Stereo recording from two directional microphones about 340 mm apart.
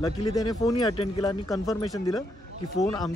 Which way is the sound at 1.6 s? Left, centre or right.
Centre.